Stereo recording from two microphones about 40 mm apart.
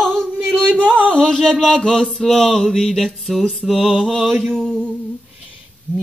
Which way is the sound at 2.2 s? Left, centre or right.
Centre.